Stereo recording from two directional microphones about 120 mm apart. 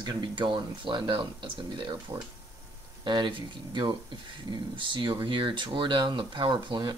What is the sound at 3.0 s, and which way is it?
Speech, 40° right (ahead or behind).